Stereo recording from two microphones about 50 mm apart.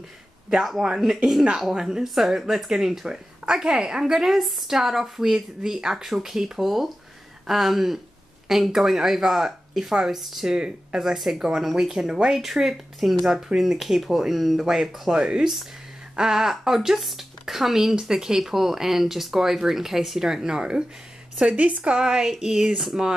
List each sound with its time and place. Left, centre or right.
0.5 s speech: centre
10.5 s speech: centre
15.1 s speech: centre
16.2 s speech: centre
21.5 s speech: right
21.9 s speech: centre